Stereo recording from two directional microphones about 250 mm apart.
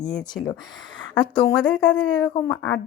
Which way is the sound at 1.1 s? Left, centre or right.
Centre.